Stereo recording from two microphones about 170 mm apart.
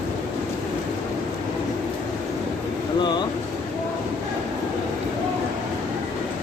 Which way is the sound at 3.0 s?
25° left (ahead or behind).